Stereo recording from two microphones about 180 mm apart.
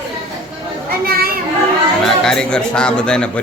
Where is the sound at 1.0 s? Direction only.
55° right (ahead or behind).